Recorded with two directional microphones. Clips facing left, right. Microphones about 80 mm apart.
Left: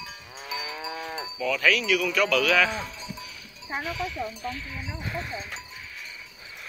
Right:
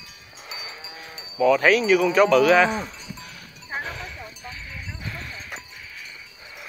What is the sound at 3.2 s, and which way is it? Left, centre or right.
Livestock, right.